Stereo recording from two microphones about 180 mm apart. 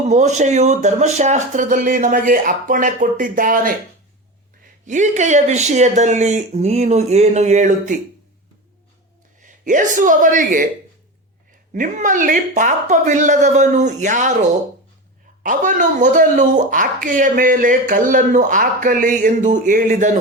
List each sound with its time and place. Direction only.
0.1 s speech: 40° right (ahead or behind)
4.9 s speech: 40° right (ahead or behind)
9.4 s a man's voice: 45° right (ahead or behind)
11.7 s speech: 45° right (ahead or behind)
15.4 s speech: 45° right (ahead or behind)